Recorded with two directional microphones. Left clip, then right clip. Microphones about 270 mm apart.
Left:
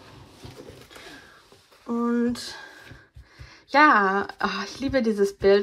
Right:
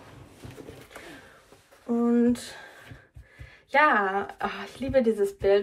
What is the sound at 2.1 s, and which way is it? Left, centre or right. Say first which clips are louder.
Speech: right 4 dB; centre.